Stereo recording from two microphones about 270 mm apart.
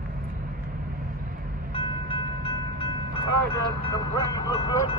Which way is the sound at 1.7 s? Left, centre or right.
Centre.